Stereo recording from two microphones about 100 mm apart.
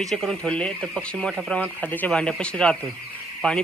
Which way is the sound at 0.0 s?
Centre (ahead or behind).